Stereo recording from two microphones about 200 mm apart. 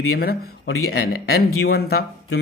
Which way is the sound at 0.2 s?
50° left (ahead or behind).